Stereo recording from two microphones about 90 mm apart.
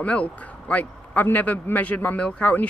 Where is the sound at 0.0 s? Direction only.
15° left (ahead or behind).